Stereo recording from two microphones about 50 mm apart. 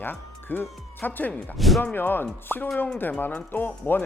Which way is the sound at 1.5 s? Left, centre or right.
Centre.